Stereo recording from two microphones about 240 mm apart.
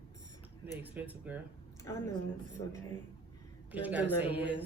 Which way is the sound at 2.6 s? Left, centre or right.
Left.